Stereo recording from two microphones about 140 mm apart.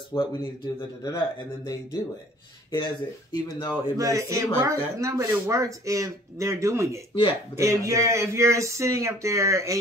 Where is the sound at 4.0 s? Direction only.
25° right (ahead or behind).